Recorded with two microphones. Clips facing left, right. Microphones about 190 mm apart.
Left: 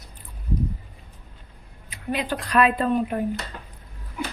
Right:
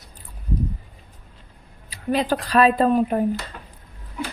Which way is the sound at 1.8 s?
35° right (ahead or behind).